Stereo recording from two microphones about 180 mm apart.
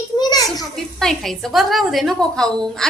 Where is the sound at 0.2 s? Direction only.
20° left (ahead or behind).